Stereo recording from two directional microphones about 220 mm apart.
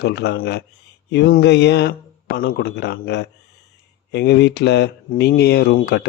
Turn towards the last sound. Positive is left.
turn(degrees=45)  # may be behind; listen again after turning